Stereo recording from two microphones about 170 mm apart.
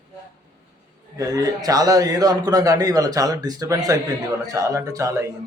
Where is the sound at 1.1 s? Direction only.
20° right (ahead or behind).